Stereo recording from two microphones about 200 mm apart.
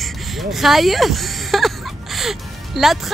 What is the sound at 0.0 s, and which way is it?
Speech, centre (ahead or behind).